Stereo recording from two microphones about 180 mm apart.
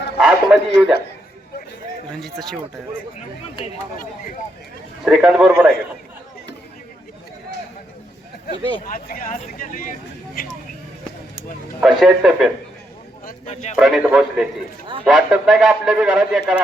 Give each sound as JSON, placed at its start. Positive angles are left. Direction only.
{"t": 0.2, "sound": "a man's voice", "side_deg": -5}
{"t": 3.9, "sound": "speech", "side_deg": 50}
{"t": 5.0, "sound": "a man's voice", "side_deg": -5}
{"t": 8.9, "sound": "speech", "side_deg": 50}
{"t": 11.8, "sound": "a man's voice", "side_deg": 0}
{"t": 13.4, "sound": "speech", "side_deg": 40}
{"t": 13.7, "sound": "a man's voice", "side_deg": -5}